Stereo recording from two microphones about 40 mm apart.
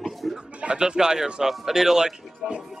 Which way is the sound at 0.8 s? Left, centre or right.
Centre.